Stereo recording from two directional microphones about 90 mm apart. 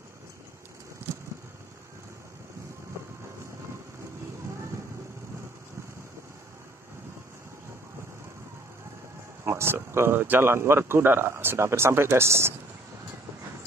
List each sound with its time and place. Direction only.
9.4 s speech: 30° right (ahead or behind)